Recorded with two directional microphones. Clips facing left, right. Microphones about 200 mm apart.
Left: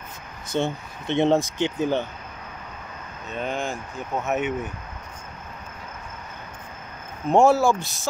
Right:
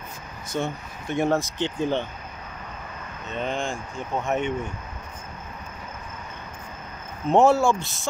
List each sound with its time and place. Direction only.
0.6 s speech: 25° left (ahead or behind)
1.6 s speech: 10° left (ahead or behind)
3.3 s speech: 5° left (ahead or behind)
7.2 s speech: centre (ahead or behind)